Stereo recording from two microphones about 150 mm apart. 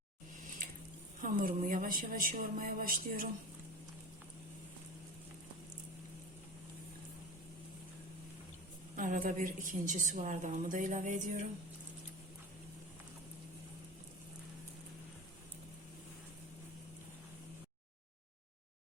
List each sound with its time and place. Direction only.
0.6 s a sound: 60° right (ahead or behind)
1.2 s speech: 65° right (ahead or behind)
9.0 s a woman's voice: 65° right (ahead or behind)